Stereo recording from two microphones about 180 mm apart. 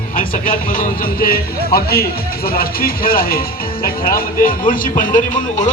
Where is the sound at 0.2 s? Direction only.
50° left (ahead or behind).